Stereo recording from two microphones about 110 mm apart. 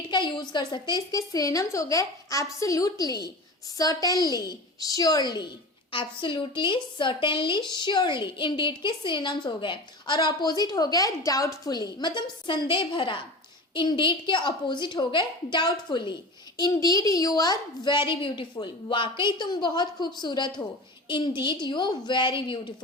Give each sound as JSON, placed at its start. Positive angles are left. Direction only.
{"t": 0.1, "sound": "a woman's voice", "side_deg": 45}
{"t": 5.9, "sound": "a woman's voice", "side_deg": 50}